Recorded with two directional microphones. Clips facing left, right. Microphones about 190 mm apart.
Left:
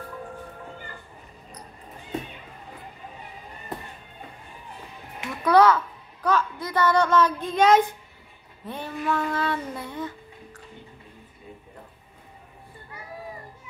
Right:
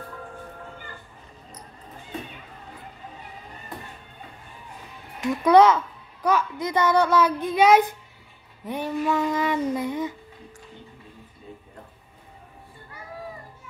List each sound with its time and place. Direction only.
5.4 s a child's voice: 20° right (ahead or behind)